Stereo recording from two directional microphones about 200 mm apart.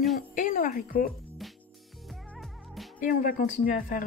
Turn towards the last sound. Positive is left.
turn(degrees=45)  # may be behind; listen again after turning